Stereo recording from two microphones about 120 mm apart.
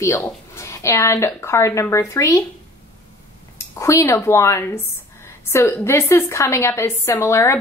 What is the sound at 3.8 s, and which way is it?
A woman's voice, 25° left (ahead or behind).